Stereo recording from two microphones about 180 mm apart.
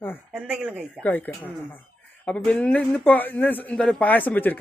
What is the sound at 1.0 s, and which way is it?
Speech, 10° left (ahead or behind).